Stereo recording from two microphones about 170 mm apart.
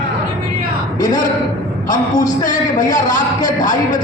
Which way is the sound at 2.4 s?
50° left (ahead or behind).